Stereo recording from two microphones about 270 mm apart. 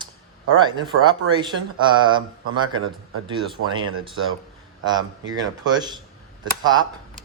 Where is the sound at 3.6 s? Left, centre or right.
Right.